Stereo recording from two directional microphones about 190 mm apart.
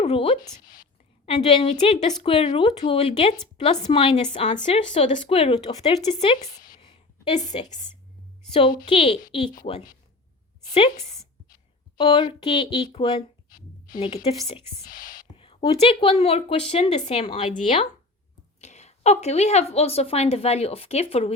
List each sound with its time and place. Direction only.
0.0 s speech: 30° left (ahead or behind)
0.6 s whispering: 45° left (ahead or behind)
1.5 s a woman's voice: 30° left (ahead or behind); by 6.7 s 45° left (ahead or behind)
6.7 s a sound: 30° left (ahead or behind)
8.8 s a woman's voice: 30° left (ahead or behind)
14.8 s whispering: 45° left (ahead or behind)
15.4 s a woman's voice: 30° left (ahead or behind)
18.6 s a woman's voice: 35° left (ahead or behind)